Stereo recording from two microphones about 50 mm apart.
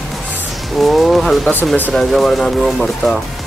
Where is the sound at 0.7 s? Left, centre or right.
Centre.